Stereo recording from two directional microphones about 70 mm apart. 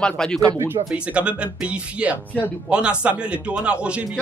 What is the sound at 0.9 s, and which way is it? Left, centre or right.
A man's voice, centre.